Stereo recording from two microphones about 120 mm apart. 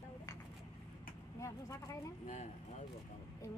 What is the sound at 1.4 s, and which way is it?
Speech, 25° left (ahead or behind).